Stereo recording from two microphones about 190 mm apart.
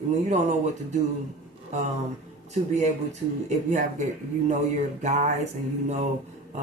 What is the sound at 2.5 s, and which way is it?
Speech, 40° right (ahead or behind).